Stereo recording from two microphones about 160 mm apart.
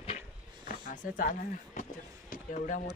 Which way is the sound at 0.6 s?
60° left (ahead or behind).